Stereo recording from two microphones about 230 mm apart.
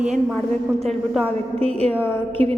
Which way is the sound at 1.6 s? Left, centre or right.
Right.